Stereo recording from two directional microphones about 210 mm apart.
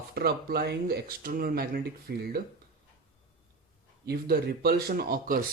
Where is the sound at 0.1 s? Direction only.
45° right (ahead or behind).